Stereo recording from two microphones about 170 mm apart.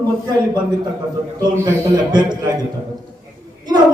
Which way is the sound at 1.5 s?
20° right (ahead or behind).